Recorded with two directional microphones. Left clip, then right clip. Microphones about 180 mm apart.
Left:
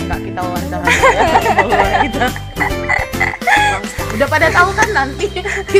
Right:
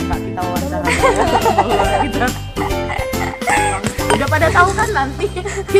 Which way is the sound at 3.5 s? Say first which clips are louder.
Left 4 dB; 15° left (ahead or behind).